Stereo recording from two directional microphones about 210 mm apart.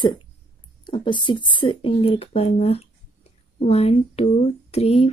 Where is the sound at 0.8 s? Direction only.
20° left (ahead or behind).